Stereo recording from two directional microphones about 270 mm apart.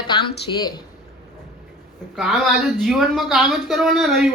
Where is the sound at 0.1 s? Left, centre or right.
Centre.